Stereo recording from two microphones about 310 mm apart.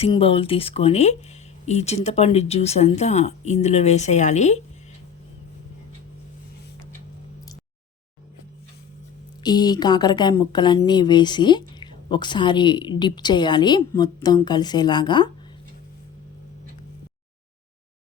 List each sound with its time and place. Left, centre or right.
0.0 s a woman's voice: centre
9.4 s a woman's voice: centre